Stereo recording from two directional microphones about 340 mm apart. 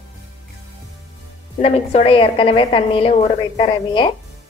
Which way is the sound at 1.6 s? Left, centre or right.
Centre.